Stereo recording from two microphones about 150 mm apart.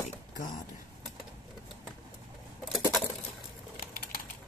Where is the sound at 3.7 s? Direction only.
80° left.